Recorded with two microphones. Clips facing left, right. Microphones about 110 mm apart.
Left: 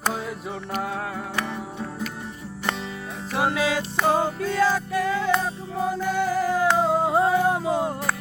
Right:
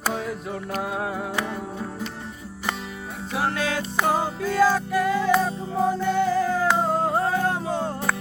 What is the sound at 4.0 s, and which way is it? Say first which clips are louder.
Music: left 1 dB; 10° right (ahead or behind).